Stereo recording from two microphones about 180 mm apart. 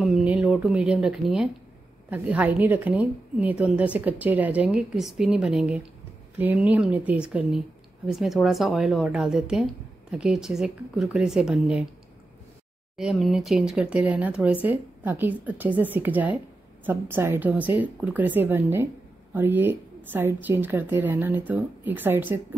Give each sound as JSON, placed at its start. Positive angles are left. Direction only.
{"t": 0.0, "sound": "a woman's voice", "side_deg": -5}
{"t": 12.9, "sound": "a woman's voice", "side_deg": 0}